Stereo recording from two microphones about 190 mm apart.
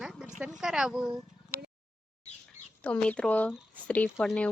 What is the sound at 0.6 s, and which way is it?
Speech, 5° right (ahead or behind).